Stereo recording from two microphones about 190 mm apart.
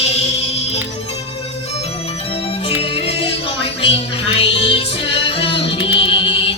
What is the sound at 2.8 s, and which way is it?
Music, 30° left (ahead or behind).